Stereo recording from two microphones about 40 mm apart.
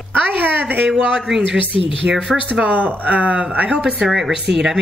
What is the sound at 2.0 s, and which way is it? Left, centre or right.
Speech, right.